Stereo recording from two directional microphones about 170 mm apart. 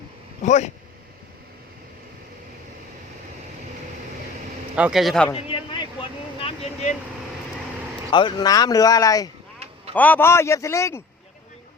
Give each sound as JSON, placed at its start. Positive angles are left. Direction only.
{"t": 0.4, "sound": "speech", "side_deg": 45}
{"t": 4.7, "sound": "speech", "side_deg": -5}
{"t": 5.3, "sound": "a sound", "side_deg": 30}
{"t": 8.1, "sound": "speech", "side_deg": 25}
{"t": 9.9, "sound": "a man's voice", "side_deg": 10}